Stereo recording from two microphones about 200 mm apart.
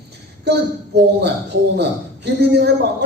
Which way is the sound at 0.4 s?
55° right (ahead or behind).